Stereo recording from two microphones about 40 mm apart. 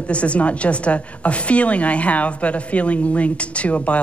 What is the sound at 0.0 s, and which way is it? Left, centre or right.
Speech, left.